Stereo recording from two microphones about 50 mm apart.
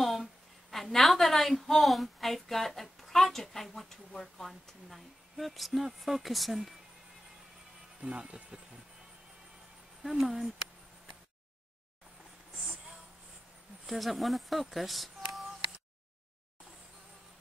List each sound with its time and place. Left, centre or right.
0.0 s a sound: centre
4.5 s speech: centre
8.0 s speech: right
10.0 s speech: centre
13.8 s speech: centre